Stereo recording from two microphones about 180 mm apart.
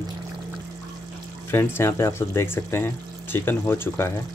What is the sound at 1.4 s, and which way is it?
Speech, 15° left (ahead or behind).